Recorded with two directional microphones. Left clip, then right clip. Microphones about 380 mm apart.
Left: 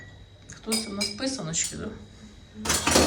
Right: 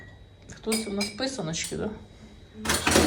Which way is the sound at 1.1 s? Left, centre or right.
Centre.